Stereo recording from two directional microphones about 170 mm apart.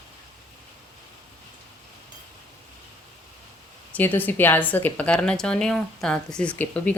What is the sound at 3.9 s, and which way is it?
A woman's voice, 10° left (ahead or behind).